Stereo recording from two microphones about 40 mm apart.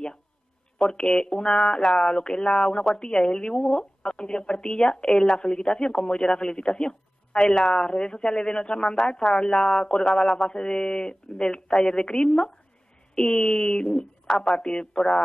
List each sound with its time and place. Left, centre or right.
0.7 s speech: centre